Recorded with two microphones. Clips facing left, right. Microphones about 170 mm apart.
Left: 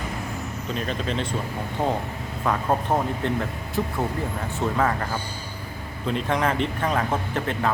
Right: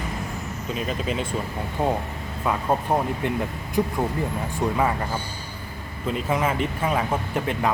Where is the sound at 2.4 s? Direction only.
10° right (ahead or behind).